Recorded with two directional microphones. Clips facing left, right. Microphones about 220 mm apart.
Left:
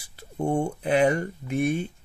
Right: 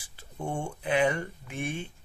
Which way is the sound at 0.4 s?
40° left (ahead or behind).